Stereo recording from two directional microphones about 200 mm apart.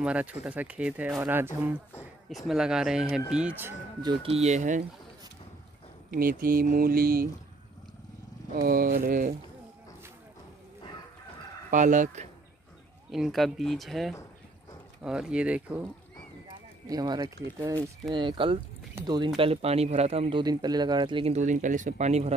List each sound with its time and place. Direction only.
0.0 s speech: 5° right (ahead or behind)
4.0 s speech: 25° right (ahead or behind)
6.1 s speech: 45° right (ahead or behind)
8.6 s speech: 45° right (ahead or behind)
11.7 s speech: 40° right (ahead or behind)
13.1 s speech: centre (ahead or behind)
16.8 s speech: 20° right (ahead or behind); by 22.3 s 35° right (ahead or behind)